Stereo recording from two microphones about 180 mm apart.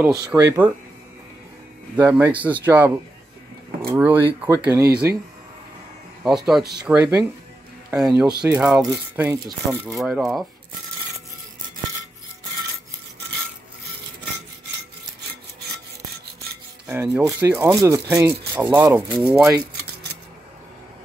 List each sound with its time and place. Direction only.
0.0 s speech: 15° right (ahead or behind)
2.0 s speech: 10° right (ahead or behind)
6.2 s speech: centre (ahead or behind); by 9.9 s 20° right (ahead or behind)
9.9 s speech: 5° right (ahead or behind)
16.8 s speech: 10° right (ahead or behind)
19.2 s speech: 5° right (ahead or behind)